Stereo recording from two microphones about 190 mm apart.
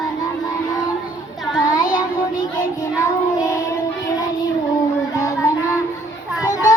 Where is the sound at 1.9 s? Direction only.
20° left (ahead or behind).